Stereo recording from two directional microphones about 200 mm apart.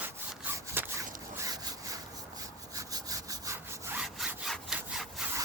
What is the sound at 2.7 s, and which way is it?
Sawing, 15° right (ahead or behind).